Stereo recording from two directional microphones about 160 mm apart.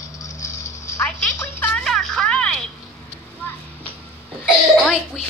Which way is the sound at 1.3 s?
15° left (ahead or behind).